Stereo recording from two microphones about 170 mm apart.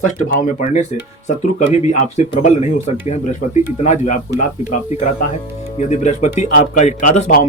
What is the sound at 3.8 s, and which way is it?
Speech, 45° left (ahead or behind).